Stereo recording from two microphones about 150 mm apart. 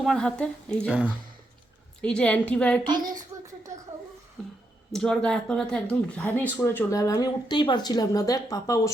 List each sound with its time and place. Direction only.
0.0 s a woman's voice: 5° left (ahead or behind)
0.9 s speech: 5° right (ahead or behind)
2.0 s a woman's voice: 5° left (ahead or behind)
2.8 s a sound: 30° right (ahead or behind)
4.9 s speech: 5° left (ahead or behind); by 8.9 s 25° left (ahead or behind)